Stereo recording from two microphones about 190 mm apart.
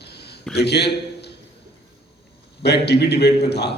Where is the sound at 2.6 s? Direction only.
60° left (ahead or behind).